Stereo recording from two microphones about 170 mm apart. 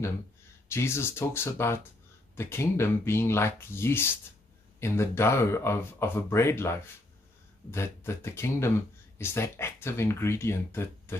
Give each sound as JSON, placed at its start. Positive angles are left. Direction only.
{"t": 0.7, "sound": "speech", "side_deg": 15}